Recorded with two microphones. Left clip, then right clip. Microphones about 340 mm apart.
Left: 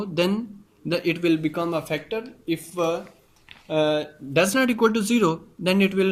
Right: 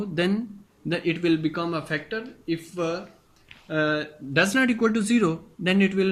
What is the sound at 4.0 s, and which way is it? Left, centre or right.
Speech, centre.